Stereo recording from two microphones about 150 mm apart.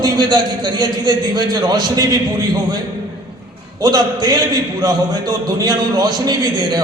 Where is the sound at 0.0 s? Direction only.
30° right (ahead or behind).